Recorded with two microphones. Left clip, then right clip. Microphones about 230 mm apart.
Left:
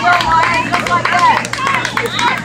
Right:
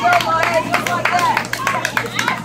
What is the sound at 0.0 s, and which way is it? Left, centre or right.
Run, right.